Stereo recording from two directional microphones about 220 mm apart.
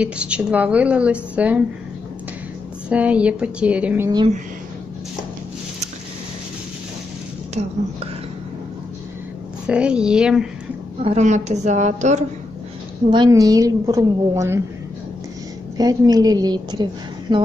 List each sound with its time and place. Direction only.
0.0 s a woman's voice: 5° right (ahead or behind)
2.9 s a woman's voice: 5° right (ahead or behind)
7.6 s speech: 30° right (ahead or behind)
9.7 s a woman's voice: 5° right (ahead or behind)
11.1 s a woman's voice: 30° right (ahead or behind)
13.1 s a woman's voice: 20° right (ahead or behind)
15.8 s a woman's voice: 15° right (ahead or behind)